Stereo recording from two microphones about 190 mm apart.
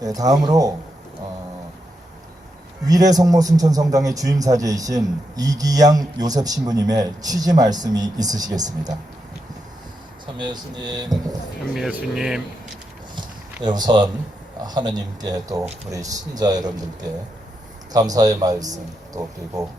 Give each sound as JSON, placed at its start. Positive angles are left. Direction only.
{"t": 0.0, "sound": "a man's voice", "side_deg": -20}
{"t": 3.1, "sound": "a man's voice", "side_deg": -20}
{"t": 10.3, "sound": "a man's voice", "side_deg": -25}
{"t": 11.7, "sound": "speech", "side_deg": -5}
{"t": 13.6, "sound": "a man's voice", "side_deg": -25}